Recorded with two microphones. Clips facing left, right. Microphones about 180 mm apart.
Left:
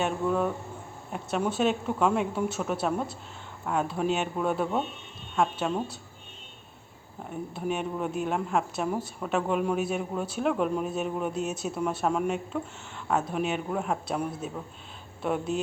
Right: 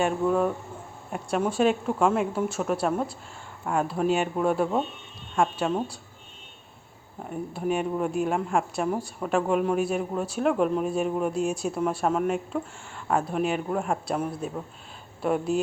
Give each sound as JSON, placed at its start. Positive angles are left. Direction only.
{"t": 0.0, "sound": "a man's voice", "side_deg": 0}
{"t": 7.3, "sound": "a man's voice", "side_deg": 0}